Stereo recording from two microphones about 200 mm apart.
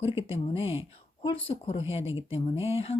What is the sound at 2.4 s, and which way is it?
Speech, 30° left (ahead or behind).